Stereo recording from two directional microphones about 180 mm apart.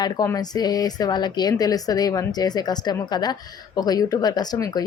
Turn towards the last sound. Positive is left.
turn(degrees=20)  # may be behind; listen again after turning